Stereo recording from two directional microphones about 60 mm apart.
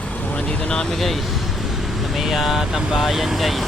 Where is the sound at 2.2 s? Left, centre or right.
Centre.